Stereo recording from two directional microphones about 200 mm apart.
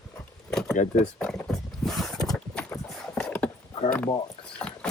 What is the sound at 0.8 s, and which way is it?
Speech, 35° left (ahead or behind).